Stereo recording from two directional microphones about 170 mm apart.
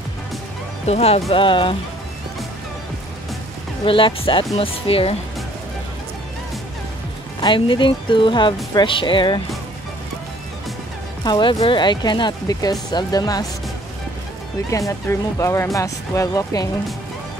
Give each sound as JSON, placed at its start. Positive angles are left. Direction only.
{"t": 0.8, "sound": "speech", "side_deg": 35}
{"t": 3.8, "sound": "speech", "side_deg": 30}
{"t": 7.4, "sound": "speech", "side_deg": 30}
{"t": 11.2, "sound": "speech", "side_deg": 25}
{"t": 14.7, "sound": "speech", "side_deg": 20}